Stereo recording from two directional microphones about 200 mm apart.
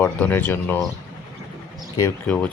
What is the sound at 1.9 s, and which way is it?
Speech, 15° left (ahead or behind).